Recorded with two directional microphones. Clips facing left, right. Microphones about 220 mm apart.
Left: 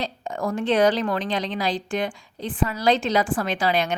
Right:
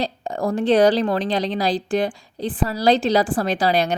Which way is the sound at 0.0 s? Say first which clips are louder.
Right 4 dB; 35° right (ahead or behind).